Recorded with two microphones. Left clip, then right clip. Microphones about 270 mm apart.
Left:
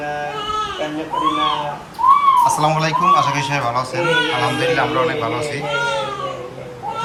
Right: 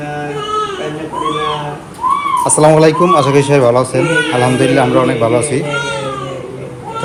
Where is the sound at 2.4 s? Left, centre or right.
Centre.